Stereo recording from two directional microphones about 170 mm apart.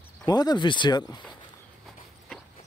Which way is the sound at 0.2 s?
25° left (ahead or behind).